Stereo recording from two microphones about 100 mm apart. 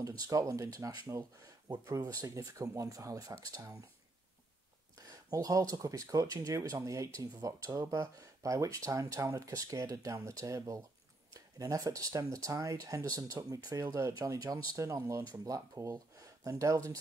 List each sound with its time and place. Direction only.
0.0 s speech: 35° right (ahead or behind)
4.9 s speech: 40° right (ahead or behind)